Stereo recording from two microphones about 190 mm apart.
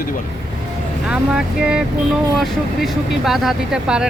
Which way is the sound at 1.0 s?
5° right (ahead or behind).